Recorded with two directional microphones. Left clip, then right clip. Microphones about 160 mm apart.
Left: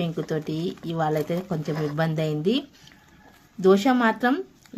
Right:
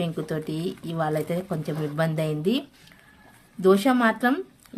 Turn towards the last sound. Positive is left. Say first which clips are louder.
# even
turn(degrees=0)  # may be behind; listen again after turning